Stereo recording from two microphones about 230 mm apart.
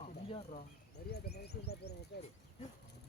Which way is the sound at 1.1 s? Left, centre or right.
Left.